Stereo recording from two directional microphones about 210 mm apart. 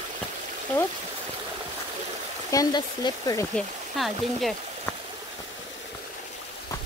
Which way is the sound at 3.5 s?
Centre (ahead or behind).